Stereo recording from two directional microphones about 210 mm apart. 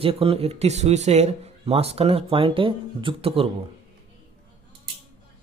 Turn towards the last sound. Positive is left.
turn(degrees=-25)  # may be behind; listen again after turning